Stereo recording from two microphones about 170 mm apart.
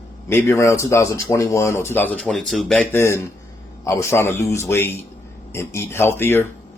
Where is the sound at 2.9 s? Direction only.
15° left (ahead or behind).